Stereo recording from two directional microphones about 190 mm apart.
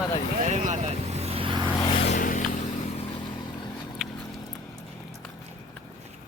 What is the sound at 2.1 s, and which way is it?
Vehicle, 45° left (ahead or behind).